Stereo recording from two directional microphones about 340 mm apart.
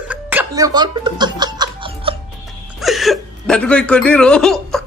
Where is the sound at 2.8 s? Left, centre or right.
Centre.